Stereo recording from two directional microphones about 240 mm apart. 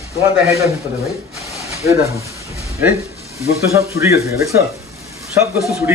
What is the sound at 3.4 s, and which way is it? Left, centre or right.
Speech, centre.